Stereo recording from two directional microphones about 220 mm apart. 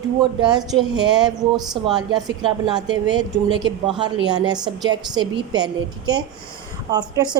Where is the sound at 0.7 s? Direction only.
Centre (ahead or behind).